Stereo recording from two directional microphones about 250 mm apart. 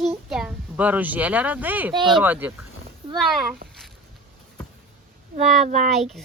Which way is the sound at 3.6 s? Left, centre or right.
Right.